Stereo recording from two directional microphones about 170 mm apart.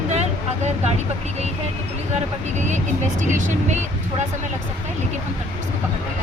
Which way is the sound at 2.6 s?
45° right (ahead or behind).